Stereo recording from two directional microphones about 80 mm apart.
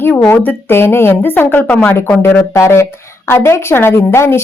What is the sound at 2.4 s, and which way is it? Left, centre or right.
A woman's voice, left.